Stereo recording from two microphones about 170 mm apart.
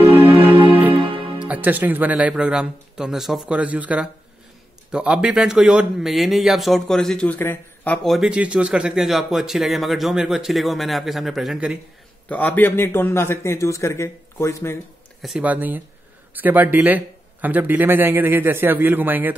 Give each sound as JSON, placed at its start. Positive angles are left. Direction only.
{"t": 0.0, "sound": "music", "side_deg": -15}
{"t": 0.9, "sound": "music", "side_deg": -30}
{"t": 1.4, "sound": "a man's voice", "side_deg": -10}
{"t": 12.3, "sound": "a man's voice", "side_deg": 10}
{"t": 15.2, "sound": "speech", "side_deg": -5}